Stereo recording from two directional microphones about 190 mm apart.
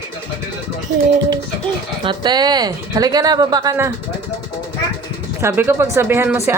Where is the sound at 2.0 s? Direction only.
25° right (ahead or behind).